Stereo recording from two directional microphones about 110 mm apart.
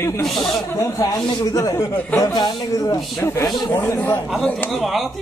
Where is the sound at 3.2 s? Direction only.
25° left (ahead or behind).